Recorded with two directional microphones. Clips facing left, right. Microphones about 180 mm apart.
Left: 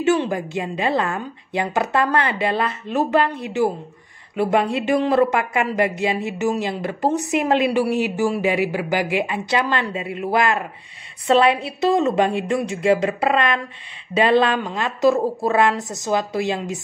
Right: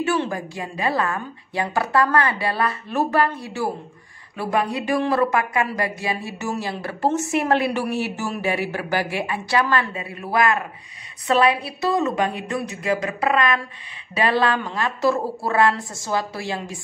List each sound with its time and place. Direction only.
0.0 s speech: 20° left (ahead or behind)